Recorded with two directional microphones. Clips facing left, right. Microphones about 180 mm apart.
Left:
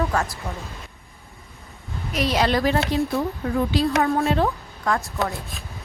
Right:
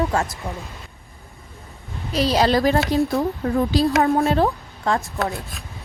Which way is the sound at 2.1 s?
35° right (ahead or behind).